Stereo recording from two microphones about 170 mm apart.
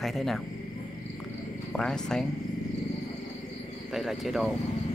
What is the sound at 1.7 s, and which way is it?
Speech, 5° left (ahead or behind).